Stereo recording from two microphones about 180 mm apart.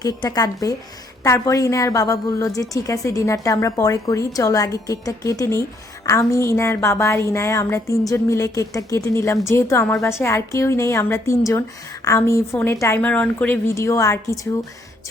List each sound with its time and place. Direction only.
0.0 s a woman's voice: 20° left (ahead or behind)